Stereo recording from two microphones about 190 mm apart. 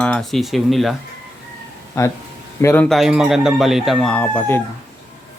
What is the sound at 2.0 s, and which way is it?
Speech, 15° left (ahead or behind).